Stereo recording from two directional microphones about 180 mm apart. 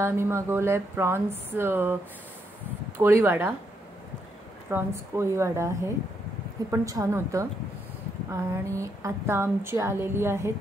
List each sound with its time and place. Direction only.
0.0 s a woman's voice: 15° right (ahead or behind)
4.6 s a woman's voice: 15° right (ahead or behind)